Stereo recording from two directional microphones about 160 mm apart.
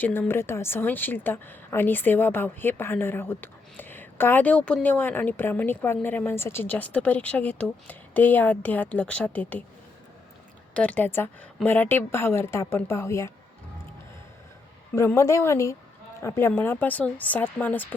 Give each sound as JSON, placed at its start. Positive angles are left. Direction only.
{"t": 0.0, "sound": "a woman's voice", "side_deg": 15}
{"t": 10.8, "sound": "a woman's voice", "side_deg": 10}
{"t": 14.9, "sound": "a woman's voice", "side_deg": 15}